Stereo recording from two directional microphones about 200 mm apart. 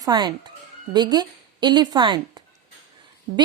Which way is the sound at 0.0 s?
20° right (ahead or behind).